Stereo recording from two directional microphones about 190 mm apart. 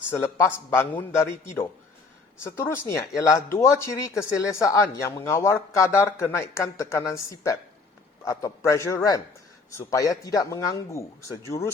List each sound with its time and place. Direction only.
0.1 s speech: 10° left (ahead or behind)